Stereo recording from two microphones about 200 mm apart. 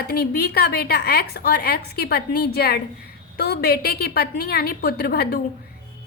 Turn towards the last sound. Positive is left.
turn(degrees=55)  # may be behind; listen again after turning